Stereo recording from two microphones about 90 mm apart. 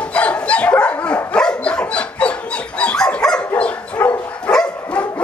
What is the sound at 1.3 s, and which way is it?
Dog, 10° left (ahead or behind).